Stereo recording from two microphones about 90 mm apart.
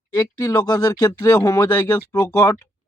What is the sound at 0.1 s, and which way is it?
Speech, 40° left (ahead or behind).